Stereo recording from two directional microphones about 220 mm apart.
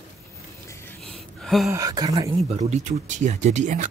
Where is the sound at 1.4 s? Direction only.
Centre (ahead or behind).